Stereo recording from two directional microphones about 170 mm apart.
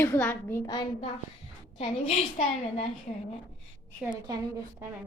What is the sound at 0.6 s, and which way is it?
Speech, 25° left (ahead or behind).